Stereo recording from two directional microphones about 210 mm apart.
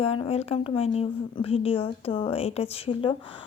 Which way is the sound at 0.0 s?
30° left (ahead or behind).